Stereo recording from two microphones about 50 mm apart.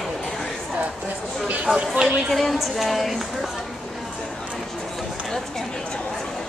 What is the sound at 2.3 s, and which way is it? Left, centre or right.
Music, centre.